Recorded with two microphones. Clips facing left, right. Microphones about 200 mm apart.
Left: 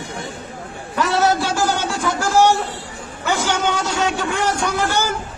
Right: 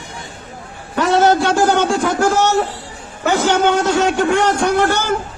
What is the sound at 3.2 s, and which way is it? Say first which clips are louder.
A man's voice: right 6 dB; 50° right (ahead or behind).